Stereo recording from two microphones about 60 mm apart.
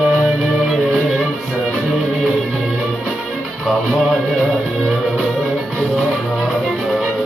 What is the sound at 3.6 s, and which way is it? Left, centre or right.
Music, centre.